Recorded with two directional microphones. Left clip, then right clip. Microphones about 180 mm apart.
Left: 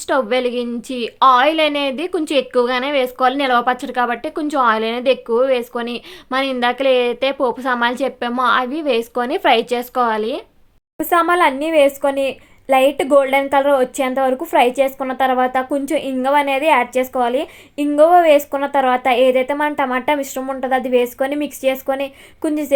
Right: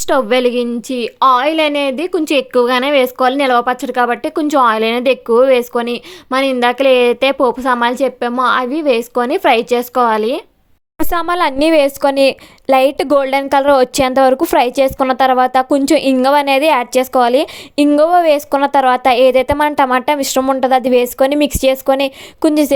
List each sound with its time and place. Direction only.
0.1 s a woman's voice: 30° right (ahead or behind)
10.9 s a woman's voice: 60° right (ahead or behind); by 22.7 s 45° right (ahead or behind)